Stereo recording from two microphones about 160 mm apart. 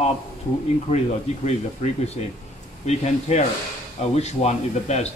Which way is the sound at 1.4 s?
45° left (ahead or behind).